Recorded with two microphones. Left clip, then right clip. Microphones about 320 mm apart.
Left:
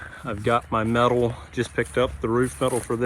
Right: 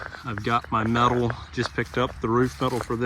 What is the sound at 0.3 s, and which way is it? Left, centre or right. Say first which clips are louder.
Speech: left 2 dB; centre.